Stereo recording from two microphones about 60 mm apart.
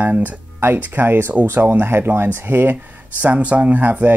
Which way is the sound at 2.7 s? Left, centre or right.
Right.